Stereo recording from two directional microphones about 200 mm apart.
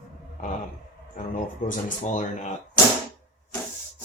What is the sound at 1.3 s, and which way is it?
Speech, 40° left (ahead or behind).